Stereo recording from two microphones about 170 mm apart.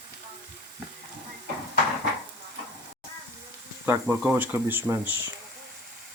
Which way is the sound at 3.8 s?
10° right (ahead or behind).